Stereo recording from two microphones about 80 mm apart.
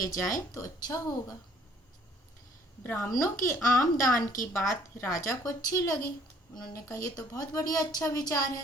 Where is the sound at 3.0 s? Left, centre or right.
Left.